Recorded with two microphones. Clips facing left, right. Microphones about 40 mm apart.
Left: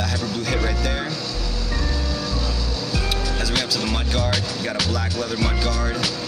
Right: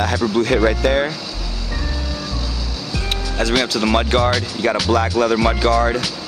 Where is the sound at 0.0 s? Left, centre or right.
Right.